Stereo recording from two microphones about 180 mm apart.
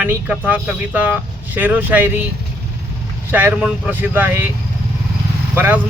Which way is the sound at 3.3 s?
10° right (ahead or behind).